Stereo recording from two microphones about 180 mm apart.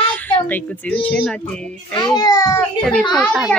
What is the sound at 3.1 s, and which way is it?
Speech, centre (ahead or behind).